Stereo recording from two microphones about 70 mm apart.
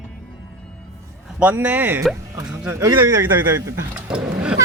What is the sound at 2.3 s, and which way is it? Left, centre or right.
Speech, right.